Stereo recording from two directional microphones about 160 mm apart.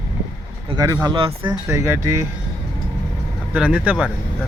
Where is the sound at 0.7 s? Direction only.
20° right (ahead or behind).